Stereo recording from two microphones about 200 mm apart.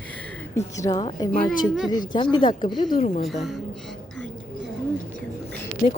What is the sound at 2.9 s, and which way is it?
Speech, 35° left (ahead or behind).